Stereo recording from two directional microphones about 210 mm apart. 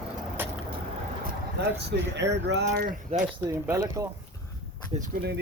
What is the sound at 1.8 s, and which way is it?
Speech, 55° right (ahead or behind).